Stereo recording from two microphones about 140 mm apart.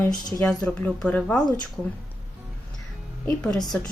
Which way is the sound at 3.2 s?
5° left (ahead or behind).